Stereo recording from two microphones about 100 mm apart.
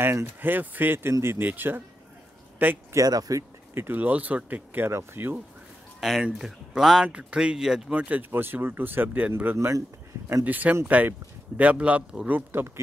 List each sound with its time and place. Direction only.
0.0 s speech: 25° right (ahead or behind)
3.0 s speech: 35° right (ahead or behind)
3.7 s speech: 20° right (ahead or behind)
5.9 s speech: centre (ahead or behind); by 10.4 s 30° right (ahead or behind)
10.4 s speech: 15° right (ahead or behind)